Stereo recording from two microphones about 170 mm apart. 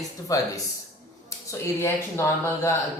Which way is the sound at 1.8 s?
15° left (ahead or behind).